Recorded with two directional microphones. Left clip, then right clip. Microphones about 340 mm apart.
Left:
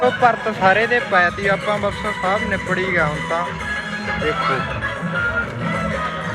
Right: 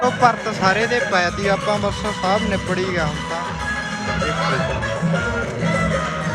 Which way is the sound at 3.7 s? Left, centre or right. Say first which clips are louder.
Even; right.